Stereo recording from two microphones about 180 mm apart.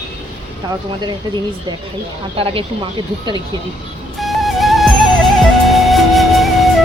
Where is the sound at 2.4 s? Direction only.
30° right (ahead or behind).